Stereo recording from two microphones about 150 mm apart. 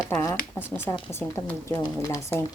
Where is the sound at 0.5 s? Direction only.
10° left (ahead or behind).